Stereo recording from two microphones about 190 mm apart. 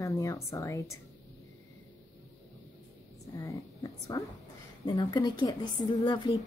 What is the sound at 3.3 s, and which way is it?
A woman's voice, 15° left (ahead or behind).